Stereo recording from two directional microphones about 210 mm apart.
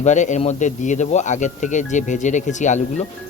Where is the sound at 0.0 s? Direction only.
35° left (ahead or behind).